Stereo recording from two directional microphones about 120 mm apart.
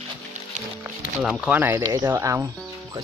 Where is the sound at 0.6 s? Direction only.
90° right.